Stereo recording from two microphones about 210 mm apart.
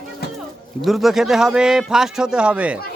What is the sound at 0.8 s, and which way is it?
Speech, centre (ahead or behind).